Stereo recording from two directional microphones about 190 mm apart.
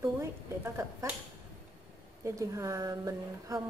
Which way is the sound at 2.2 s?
15° right (ahead or behind).